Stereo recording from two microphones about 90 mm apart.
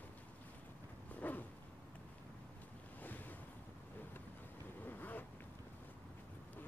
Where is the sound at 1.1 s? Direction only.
20° left (ahead or behind).